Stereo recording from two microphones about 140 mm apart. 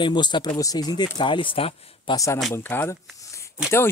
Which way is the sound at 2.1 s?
20° left (ahead or behind).